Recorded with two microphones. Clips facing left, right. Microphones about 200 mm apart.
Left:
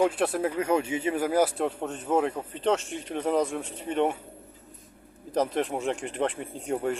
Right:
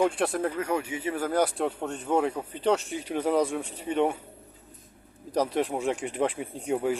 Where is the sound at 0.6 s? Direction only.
25° left (ahead or behind).